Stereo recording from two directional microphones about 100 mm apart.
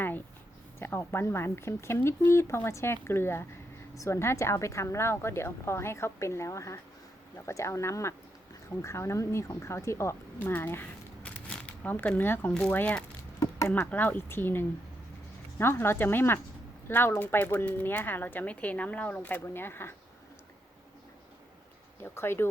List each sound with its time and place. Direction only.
0.8 s speech: 25° left (ahead or behind)
22.0 s speech: 25° left (ahead or behind)